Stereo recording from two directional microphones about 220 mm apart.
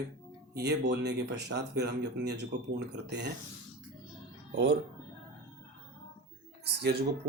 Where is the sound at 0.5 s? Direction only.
50° right (ahead or behind).